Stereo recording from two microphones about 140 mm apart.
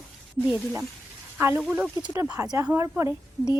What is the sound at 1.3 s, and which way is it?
A woman's voice, 15° right (ahead or behind).